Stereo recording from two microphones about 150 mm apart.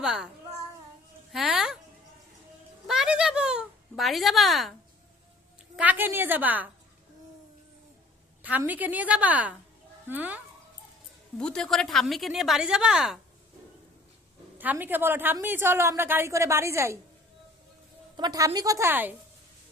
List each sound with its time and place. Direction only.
0.0 s a child's voice: 5° right (ahead or behind)
1.3 s speech: centre (ahead or behind)
2.8 s a sound: 5° right (ahead or behind)
5.7 s a woman's voice: 10° right (ahead or behind)
8.4 s a woman's voice: 10° right (ahead or behind)
11.3 s a woman's voice: 5° left (ahead or behind)
14.6 s a woman's voice: 10° right (ahead or behind)
18.2 s a woman's voice: 25° right (ahead or behind)